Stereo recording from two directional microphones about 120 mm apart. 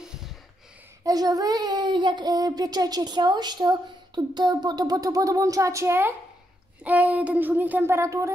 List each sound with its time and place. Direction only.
1.0 s speech: 30° right (ahead or behind)